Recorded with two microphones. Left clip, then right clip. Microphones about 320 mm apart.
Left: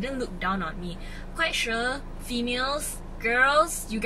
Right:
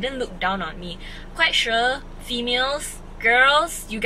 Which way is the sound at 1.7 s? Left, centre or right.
Centre.